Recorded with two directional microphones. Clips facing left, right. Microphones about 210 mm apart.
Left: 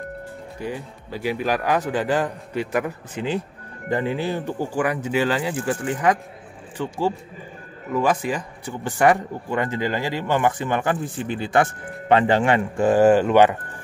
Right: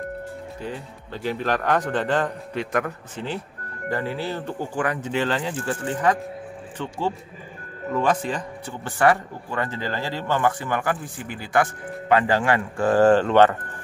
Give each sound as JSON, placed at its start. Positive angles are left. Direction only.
{"t": 0.6, "sound": "speech", "side_deg": 10}